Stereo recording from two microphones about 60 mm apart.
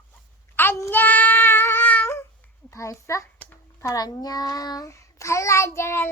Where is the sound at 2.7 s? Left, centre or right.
Left.